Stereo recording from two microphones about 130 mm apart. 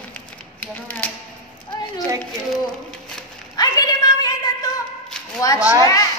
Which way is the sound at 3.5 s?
30° left (ahead or behind).